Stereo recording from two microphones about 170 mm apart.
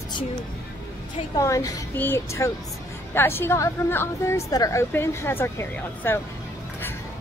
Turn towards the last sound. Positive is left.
turn(degrees=15)  # may be behind; listen again after turning